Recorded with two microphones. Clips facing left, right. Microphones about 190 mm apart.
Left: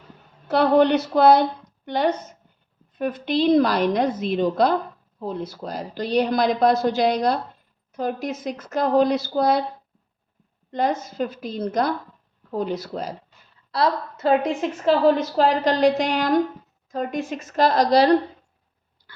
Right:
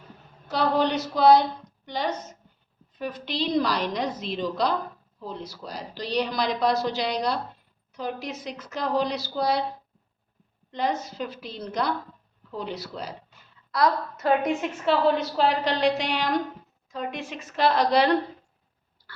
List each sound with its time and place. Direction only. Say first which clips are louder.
0.4 s a woman's voice: left 7 dB; 60° left (ahead or behind)
10.7 s a woman's voice: left 4 dB; 50° left (ahead or behind)
13.7 s a woman's voice: left 1 dB; 30° left (ahead or behind)